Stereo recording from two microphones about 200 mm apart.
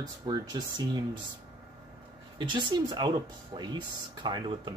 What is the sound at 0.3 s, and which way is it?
Speech, 20° right (ahead or behind).